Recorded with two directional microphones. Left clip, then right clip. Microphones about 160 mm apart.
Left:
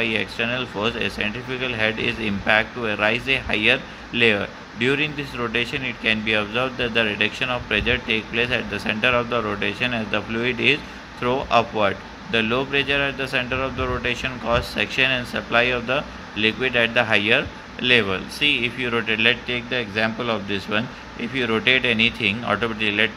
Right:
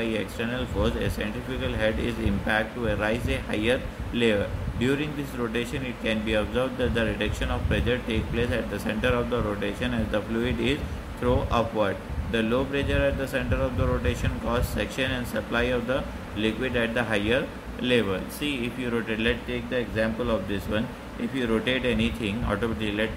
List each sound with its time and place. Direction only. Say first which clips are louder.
0.0 s speech: left 6 dB; 35° left (ahead or behind)